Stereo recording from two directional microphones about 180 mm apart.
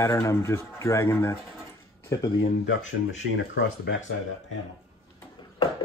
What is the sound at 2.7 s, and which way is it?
Speech, 90° left.